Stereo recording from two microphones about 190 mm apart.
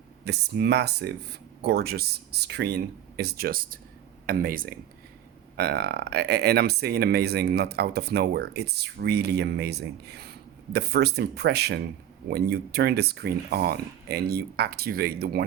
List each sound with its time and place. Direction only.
0.3 s speech: 60° right (ahead or behind)